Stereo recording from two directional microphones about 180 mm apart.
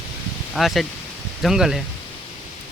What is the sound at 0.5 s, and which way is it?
Speech, centre (ahead or behind).